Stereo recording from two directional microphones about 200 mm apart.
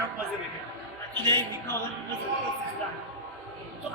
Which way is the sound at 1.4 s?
10° left (ahead or behind).